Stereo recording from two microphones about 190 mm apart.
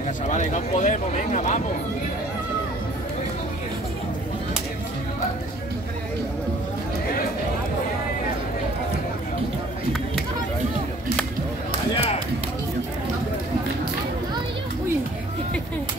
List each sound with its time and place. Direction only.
0.3 s speech: 40° left (ahead or behind)
11.9 s music: 30° left (ahead or behind)